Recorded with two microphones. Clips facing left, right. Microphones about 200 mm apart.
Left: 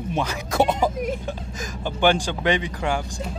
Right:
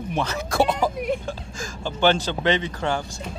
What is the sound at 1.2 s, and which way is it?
Speech, 20° left (ahead or behind).